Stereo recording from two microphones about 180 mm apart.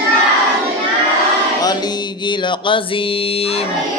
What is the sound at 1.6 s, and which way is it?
Music, 20° left (ahead or behind).